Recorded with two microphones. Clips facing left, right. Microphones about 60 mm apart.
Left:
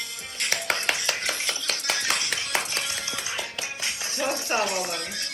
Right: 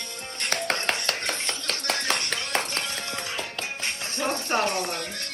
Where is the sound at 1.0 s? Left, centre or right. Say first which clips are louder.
Even; right.